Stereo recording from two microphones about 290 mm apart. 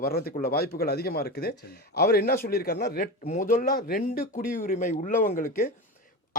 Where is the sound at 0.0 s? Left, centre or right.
Left.